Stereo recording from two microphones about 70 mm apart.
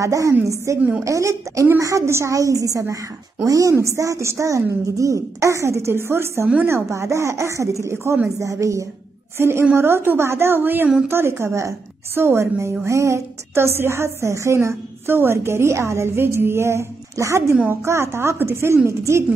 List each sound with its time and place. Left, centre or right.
0.0 s a woman's voice: right
9.4 s a woman's voice: right